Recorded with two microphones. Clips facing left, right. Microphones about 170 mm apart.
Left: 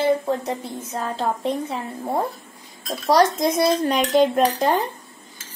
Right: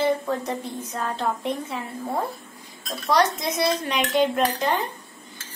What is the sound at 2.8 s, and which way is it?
A woman's voice, 40° left (ahead or behind).